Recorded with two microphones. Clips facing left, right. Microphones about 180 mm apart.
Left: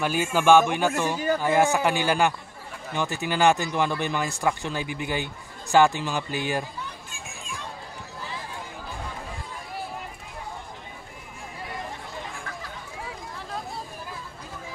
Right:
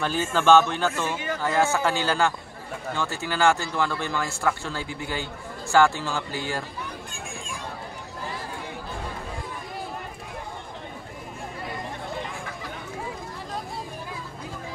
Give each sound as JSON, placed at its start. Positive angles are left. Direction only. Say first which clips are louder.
{"t": 0.0, "sound": "speech", "louder": "left 1 dB", "side_deg": 10}
{"t": 1.1, "sound": "a man's voice", "louder": "left 5 dB", "side_deg": 35}
{"t": 1.4, "sound": "speech", "louder": "even", "side_deg": 15}